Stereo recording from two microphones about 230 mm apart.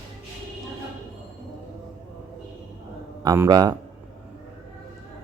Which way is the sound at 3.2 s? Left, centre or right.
Centre.